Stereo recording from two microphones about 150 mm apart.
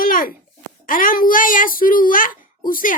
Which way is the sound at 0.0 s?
70° left (ahead or behind).